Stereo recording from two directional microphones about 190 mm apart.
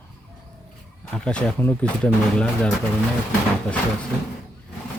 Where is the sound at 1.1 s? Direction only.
5° left (ahead or behind).